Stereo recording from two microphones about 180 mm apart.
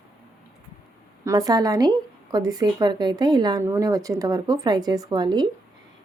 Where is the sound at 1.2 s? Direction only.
20° right (ahead or behind).